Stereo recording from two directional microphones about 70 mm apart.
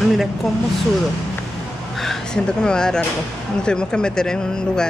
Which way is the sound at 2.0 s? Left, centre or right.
Centre.